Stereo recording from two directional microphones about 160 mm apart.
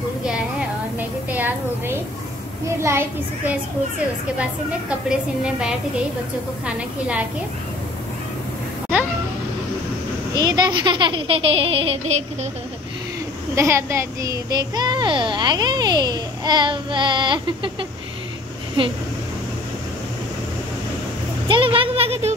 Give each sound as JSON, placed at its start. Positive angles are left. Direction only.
{"t": 0.2, "sound": "a sound", "side_deg": -5}
{"t": 2.8, "sound": "a child's voice", "side_deg": -15}
{"t": 5.4, "sound": "a woman's voice", "side_deg": -5}
{"t": 10.3, "sound": "speech", "side_deg": -25}
{"t": 13.6, "sound": "a child's voice", "side_deg": -15}
{"t": 21.5, "sound": "speech", "side_deg": -30}